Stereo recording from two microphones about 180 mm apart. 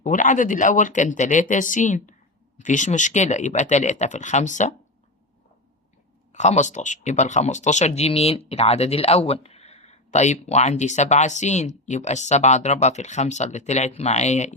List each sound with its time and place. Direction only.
0.0 s speech: 45° left (ahead or behind)
6.3 s speech: 40° left (ahead or behind)